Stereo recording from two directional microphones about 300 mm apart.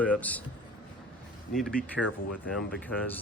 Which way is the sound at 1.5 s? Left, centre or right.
Centre.